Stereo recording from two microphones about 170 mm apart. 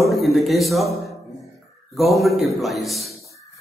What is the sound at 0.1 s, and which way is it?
A man's voice, centre (ahead or behind).